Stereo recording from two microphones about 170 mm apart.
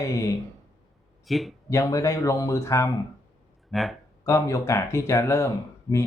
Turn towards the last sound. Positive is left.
turn(degrees=15)  # may be behind; listen again after turning